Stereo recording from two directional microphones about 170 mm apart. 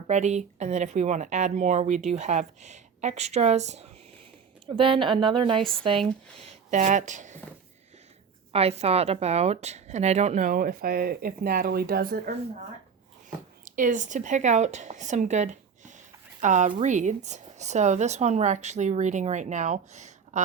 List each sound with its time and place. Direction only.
0.1 s speech: 40° right (ahead or behind)
4.8 s speech: 30° right (ahead or behind)
6.4 s speech: 45° right (ahead or behind)
8.5 s speech: 40° right (ahead or behind); by 12.4 s 65° right (ahead or behind)
13.7 s speech: 50° right (ahead or behind)